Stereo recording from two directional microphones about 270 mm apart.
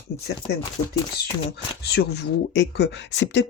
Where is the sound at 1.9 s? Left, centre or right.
Left.